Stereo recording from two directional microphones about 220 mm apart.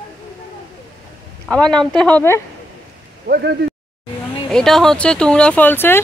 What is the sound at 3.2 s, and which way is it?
Speech, 45° right (ahead or behind).